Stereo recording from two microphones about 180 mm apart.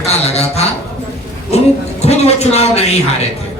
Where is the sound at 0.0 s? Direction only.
35° left (ahead or behind).